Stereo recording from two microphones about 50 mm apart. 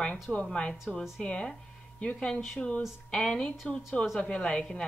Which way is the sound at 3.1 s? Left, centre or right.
Centre.